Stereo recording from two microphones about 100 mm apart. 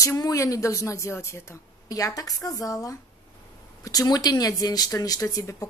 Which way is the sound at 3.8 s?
40° left (ahead or behind).